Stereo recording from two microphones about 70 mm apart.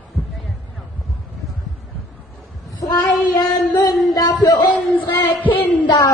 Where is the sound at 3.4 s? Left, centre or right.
Left.